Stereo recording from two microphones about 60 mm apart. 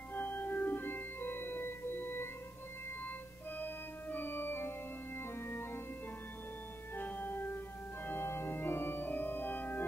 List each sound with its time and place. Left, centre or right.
0.1 s music: left
3.5 s organ: left
7.0 s music: left
8.1 s organ: left